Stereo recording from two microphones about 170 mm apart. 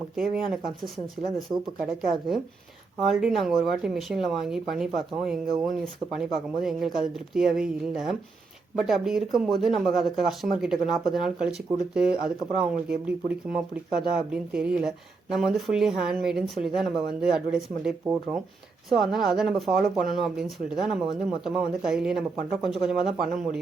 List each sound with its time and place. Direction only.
0.2 s speech: 5° right (ahead or behind)